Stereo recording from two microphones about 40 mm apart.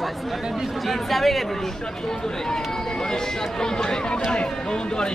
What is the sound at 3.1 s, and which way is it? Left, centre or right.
Speech, centre.